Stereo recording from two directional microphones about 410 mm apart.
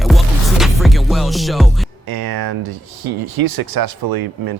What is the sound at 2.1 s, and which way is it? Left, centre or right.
Speech, right.